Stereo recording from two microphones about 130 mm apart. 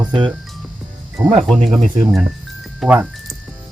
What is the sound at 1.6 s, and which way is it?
Speech, 65° right (ahead or behind).